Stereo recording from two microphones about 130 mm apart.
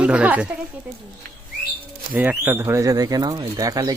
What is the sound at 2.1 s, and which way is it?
Speech, 15° right (ahead or behind).